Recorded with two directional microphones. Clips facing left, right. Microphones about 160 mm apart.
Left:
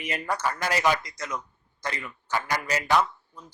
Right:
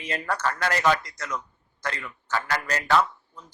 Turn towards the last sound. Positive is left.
turn(degrees=10)  # may be behind; listen again after turning